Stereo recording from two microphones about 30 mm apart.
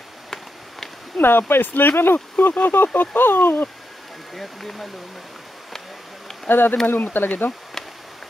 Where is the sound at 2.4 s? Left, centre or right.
Left.